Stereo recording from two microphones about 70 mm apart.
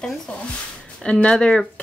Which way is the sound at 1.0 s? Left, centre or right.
Centre.